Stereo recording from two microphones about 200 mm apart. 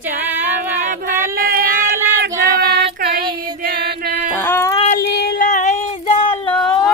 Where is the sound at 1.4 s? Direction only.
50° right (ahead or behind).